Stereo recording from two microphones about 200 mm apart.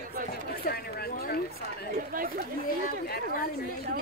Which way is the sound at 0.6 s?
50° left (ahead or behind).